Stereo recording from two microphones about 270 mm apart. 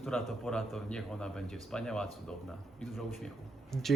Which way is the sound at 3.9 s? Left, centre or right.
Centre.